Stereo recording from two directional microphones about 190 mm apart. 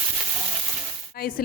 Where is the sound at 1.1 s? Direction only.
50° left (ahead or behind).